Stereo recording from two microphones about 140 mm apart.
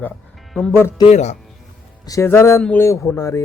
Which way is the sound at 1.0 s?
55° left (ahead or behind).